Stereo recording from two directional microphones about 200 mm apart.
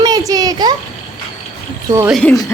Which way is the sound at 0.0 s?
20° right (ahead or behind).